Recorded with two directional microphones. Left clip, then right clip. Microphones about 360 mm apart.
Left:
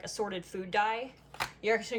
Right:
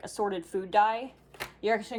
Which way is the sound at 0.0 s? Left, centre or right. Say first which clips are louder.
Right 4 dB; centre.